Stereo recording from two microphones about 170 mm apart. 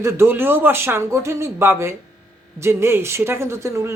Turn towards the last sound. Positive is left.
turn(degrees=-15)  # may be behind; listen again after turning